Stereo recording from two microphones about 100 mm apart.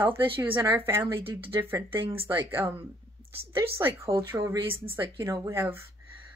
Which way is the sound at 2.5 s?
25° right (ahead or behind).